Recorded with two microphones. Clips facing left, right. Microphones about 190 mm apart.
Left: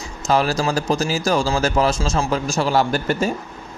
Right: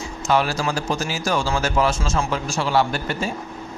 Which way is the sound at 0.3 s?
40° left (ahead or behind).